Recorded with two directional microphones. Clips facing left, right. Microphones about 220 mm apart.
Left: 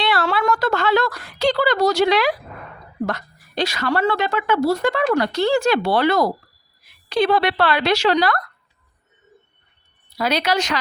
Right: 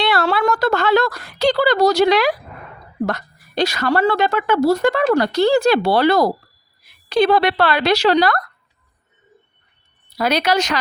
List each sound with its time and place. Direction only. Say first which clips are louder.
0.0 s a sound: right 3 dB; 40° right (ahead or behind)
3.1 s a woman's voice: right 2 dB; 40° right (ahead or behind)
10.2 s speech: right 3 dB; 45° right (ahead or behind)